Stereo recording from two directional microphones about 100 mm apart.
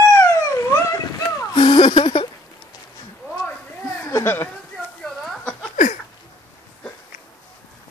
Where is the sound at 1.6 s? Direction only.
60° left (ahead or behind).